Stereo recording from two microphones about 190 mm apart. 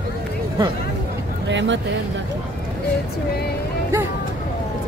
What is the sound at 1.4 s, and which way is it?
Speech, 70° right (ahead or behind).